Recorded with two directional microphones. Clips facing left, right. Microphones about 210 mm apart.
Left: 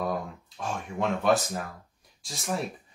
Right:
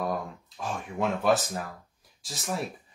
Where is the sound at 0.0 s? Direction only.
Centre (ahead or behind).